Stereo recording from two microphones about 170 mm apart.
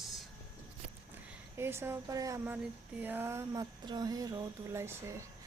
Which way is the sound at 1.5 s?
15° right (ahead or behind).